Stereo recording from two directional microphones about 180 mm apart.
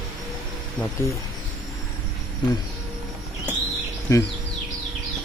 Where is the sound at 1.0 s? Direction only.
15° left (ahead or behind).